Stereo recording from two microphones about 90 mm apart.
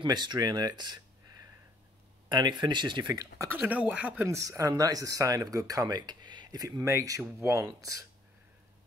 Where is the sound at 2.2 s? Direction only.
55° right (ahead or behind).